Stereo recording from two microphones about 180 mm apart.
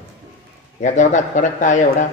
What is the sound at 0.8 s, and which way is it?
A man's voice, 45° left (ahead or behind).